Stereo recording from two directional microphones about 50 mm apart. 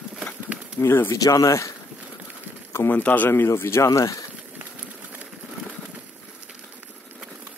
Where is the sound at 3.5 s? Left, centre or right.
Left.